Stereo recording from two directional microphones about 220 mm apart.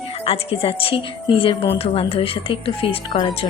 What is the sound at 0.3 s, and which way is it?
A woman's voice, 25° left (ahead or behind).